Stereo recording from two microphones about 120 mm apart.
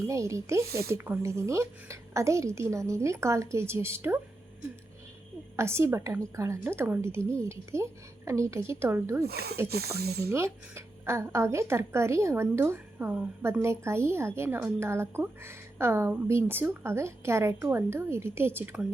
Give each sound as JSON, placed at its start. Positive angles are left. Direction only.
{"t": 0.1, "sound": "a woman's voice", "side_deg": -25}
{"t": 5.5, "sound": "a woman's voice", "side_deg": -20}